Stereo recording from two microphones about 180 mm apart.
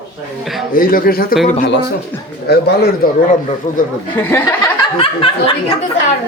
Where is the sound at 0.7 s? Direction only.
50° left (ahead or behind).